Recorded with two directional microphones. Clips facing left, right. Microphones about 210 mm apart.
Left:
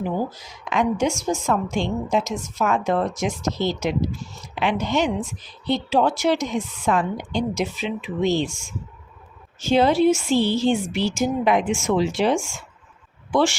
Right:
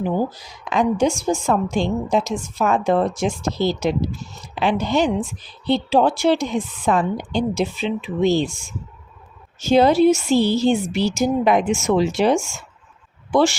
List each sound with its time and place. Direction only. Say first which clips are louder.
0.3 s a woman's voice: right 1 dB; 35° right (ahead or behind)
9.6 s a woman's voice: right 3 dB; 40° right (ahead or behind)